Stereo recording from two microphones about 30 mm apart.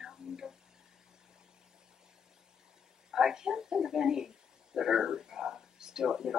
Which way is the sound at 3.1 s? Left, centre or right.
Centre.